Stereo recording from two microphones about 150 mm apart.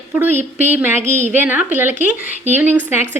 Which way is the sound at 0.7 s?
15° right (ahead or behind).